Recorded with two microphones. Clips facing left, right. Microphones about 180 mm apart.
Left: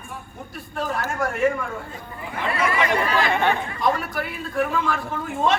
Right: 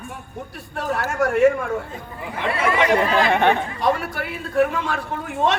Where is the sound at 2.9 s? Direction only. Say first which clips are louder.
Right 4 dB; 70° right (ahead or behind).